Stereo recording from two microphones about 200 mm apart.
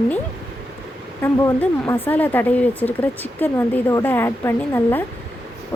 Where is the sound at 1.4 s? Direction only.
10° left (ahead or behind).